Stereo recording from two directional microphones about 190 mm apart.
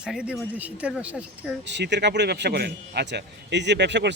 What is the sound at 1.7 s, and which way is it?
A man's voice, 65° right (ahead or behind).